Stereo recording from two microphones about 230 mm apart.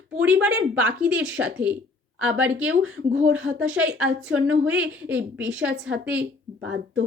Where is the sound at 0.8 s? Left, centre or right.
Centre.